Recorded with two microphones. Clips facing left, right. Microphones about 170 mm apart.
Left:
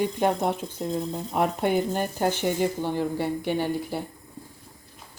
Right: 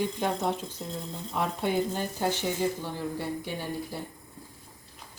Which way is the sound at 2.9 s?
70° left (ahead or behind).